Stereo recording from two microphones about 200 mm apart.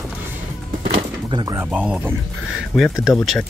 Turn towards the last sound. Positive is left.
turn(degrees=0)  # may be behind; listen again after turning